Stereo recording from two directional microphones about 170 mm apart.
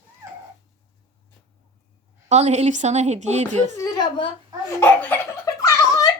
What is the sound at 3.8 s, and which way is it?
Speech, 25° left (ahead or behind).